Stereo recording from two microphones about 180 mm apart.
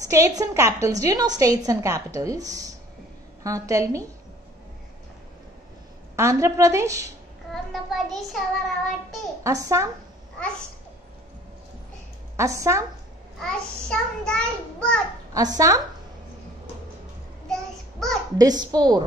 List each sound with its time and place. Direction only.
0.1 s a woman's voice: 15° right (ahead or behind)
6.1 s a woman's voice: 15° right (ahead or behind)
7.5 s child singing: centre (ahead or behind)
9.4 s a woman's voice: 15° right (ahead or behind)
12.4 s a woman's voice: 15° right (ahead or behind)
13.4 s child singing: 5° left (ahead or behind)
15.3 s a woman's voice: 20° right (ahead or behind)
17.5 s child singing: centre (ahead or behind)
18.4 s a woman's voice: 20° right (ahead or behind)